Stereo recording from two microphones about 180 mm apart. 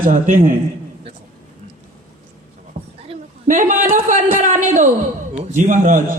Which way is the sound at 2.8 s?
50° right (ahead or behind).